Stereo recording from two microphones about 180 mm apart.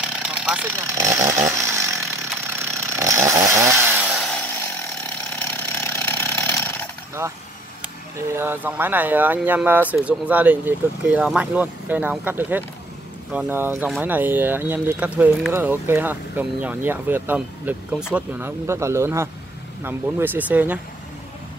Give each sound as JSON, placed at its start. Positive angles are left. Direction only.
{"t": 0.0, "sound": "chainsaw", "side_deg": -5}
{"t": 5.5, "sound": "chainsaw", "side_deg": 15}
{"t": 7.2, "sound": "speech", "side_deg": -10}